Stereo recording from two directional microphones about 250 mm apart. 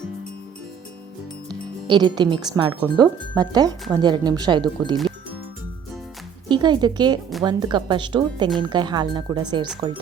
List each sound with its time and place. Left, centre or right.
1.5 s speech: centre
6.5 s speech: centre